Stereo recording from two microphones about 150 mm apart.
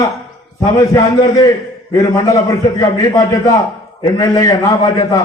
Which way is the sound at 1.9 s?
25° left (ahead or behind).